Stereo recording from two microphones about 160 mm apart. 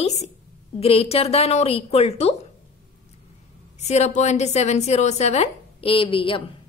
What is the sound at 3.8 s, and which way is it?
A woman's voice, 45° left (ahead or behind).